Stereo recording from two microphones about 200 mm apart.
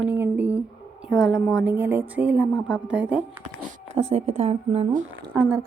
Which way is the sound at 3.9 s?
30° right (ahead or behind).